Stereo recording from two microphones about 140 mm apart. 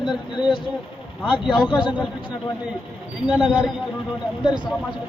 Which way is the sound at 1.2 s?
35° left (ahead or behind).